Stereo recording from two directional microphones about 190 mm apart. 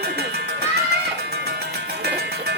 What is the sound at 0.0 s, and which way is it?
Music, 55° right (ahead or behind).